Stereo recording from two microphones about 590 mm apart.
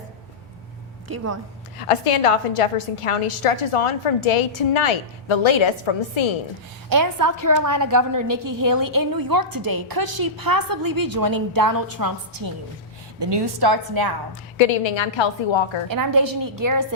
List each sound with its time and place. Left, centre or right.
1.0 s speech: right
1.8 s a woman's voice: left
6.9 s a woman's voice: right
14.6 s a woman's voice: left
15.9 s a woman's voice: right